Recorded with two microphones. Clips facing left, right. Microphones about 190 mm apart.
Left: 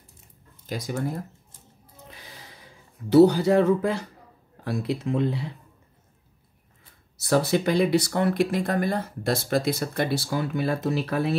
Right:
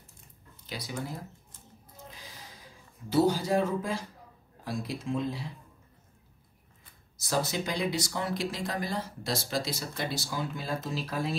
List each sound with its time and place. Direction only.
0.7 s speech: 45° left (ahead or behind)
2.0 s gasp: 65° left (ahead or behind)
3.1 s speech: 65° left (ahead or behind)
7.2 s speech: 65° left (ahead or behind)